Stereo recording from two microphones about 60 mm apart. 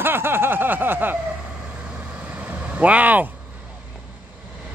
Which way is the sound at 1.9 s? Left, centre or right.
Right.